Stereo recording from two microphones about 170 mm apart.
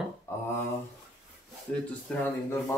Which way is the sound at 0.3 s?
15° left (ahead or behind).